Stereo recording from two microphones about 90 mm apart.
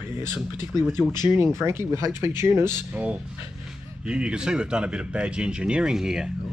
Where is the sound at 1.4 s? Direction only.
30° right (ahead or behind).